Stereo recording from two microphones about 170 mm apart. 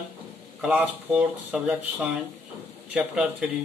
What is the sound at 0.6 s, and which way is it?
Speech, 10° right (ahead or behind).